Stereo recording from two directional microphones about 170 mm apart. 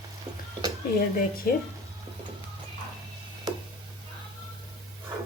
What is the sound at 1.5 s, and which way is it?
Speech, 55° left (ahead or behind).